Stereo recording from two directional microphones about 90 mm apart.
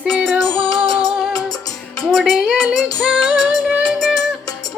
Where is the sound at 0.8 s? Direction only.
45° left (ahead or behind).